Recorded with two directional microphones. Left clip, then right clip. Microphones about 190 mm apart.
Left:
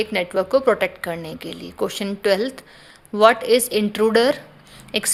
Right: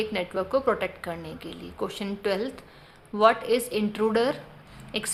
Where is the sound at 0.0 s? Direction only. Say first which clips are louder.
Left 7 dB; 40° left (ahead or behind).